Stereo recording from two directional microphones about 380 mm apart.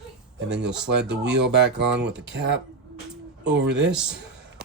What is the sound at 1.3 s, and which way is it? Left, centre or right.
Speech, right.